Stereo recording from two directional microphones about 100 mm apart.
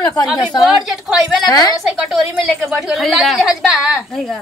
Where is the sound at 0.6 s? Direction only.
5° right (ahead or behind).